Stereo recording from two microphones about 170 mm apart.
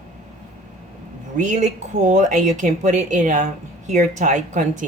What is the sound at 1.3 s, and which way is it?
Speech, 45° right (ahead or behind).